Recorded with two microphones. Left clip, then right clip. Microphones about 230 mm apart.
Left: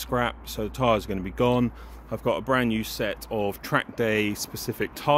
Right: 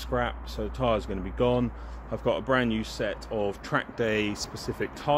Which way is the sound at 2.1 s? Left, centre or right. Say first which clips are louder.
Left 1 dB; left.